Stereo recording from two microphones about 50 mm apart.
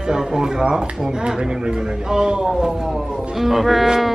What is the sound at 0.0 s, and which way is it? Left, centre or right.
Speech, centre.